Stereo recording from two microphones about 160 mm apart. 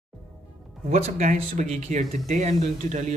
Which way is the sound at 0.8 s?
50° right (ahead or behind).